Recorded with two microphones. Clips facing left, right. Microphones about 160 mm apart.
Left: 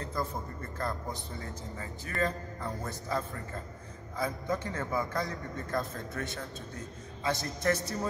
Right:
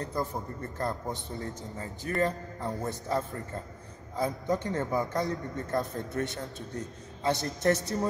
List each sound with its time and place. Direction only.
0.1 s a man's voice: 20° right (ahead or behind)
1.4 s a man's voice: 40° right (ahead or behind)
2.1 s a man's voice: 20° right (ahead or behind)